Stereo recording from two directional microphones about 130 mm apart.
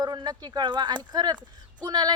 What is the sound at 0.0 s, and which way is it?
A woman's voice, 35° right (ahead or behind).